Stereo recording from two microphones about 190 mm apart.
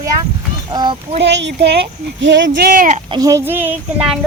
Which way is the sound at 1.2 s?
65° right (ahead or behind).